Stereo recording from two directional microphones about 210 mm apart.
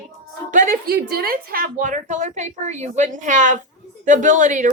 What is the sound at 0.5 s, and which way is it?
Speech, 40° right (ahead or behind).